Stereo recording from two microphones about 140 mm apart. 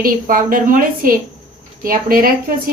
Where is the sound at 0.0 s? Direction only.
85° right.